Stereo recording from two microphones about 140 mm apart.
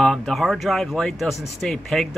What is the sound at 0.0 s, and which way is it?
Speech, centre (ahead or behind).